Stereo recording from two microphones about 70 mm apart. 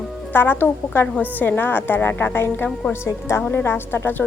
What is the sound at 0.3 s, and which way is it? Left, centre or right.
A woman's voice, left.